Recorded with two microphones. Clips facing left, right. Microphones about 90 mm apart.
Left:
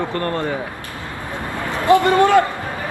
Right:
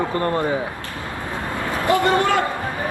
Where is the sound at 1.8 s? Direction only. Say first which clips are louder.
Left 5 dB; 25° left (ahead or behind).